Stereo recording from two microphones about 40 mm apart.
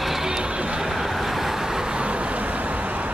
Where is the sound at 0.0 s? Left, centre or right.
Centre.